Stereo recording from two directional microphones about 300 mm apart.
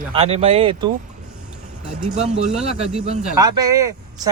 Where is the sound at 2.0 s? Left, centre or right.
Right.